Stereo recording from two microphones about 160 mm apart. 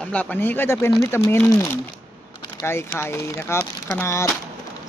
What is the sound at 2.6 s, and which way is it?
Speech, 15° left (ahead or behind).